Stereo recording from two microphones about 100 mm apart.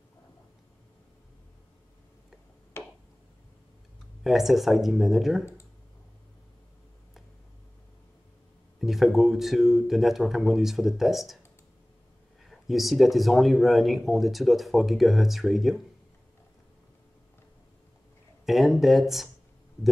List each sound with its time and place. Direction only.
2.8 s a sound: 25° left (ahead or behind)
4.2 s speech: centre (ahead or behind)
8.7 s speech: centre (ahead or behind)
12.4 s speech: centre (ahead or behind)
18.4 s speech: centre (ahead or behind)